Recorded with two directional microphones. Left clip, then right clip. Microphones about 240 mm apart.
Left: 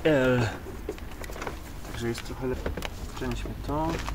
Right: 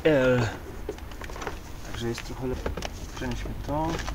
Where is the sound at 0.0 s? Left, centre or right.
Centre.